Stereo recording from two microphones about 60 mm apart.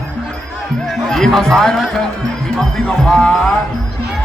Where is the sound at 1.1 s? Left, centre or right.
Centre.